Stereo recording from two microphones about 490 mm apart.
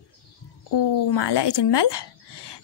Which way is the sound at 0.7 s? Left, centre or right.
Left.